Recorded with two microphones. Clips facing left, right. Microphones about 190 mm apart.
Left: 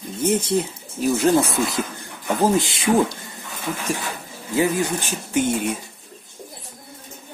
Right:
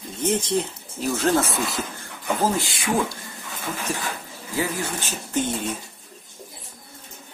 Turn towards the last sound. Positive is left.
turn(degrees=10)  # may be behind; listen again after turning